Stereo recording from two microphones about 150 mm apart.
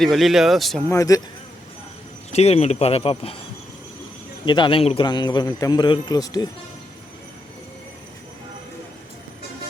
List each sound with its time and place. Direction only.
0.0 s speech: centre (ahead or behind)
0.9 s a man's voice: 20° left (ahead or behind)
2.3 s speech: 45° left (ahead or behind)
4.4 s a man's voice: 30° left (ahead or behind)